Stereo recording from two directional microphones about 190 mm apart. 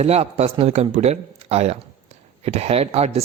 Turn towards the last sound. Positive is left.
turn(degrees=-30)  # may be behind; listen again after turning